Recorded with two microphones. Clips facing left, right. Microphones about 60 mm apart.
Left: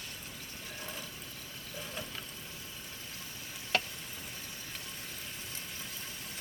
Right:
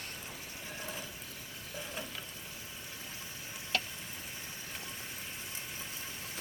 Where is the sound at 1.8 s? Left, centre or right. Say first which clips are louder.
Even; centre.